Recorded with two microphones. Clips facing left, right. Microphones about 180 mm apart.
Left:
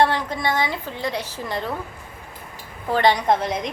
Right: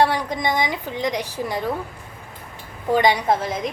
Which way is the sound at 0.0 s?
15° right (ahead or behind).